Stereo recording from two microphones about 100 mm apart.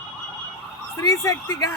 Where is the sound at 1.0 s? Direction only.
35° left (ahead or behind).